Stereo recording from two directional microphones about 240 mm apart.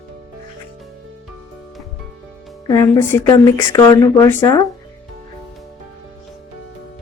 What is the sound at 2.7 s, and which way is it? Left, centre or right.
Speech, centre.